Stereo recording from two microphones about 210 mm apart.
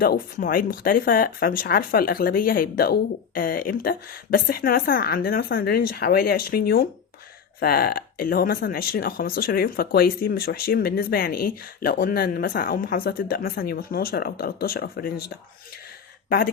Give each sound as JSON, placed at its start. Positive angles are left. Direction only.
{"t": 0.0, "sound": "speech", "side_deg": 45}